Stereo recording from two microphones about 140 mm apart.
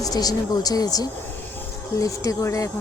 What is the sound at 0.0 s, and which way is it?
Speech, 25° left (ahead or behind).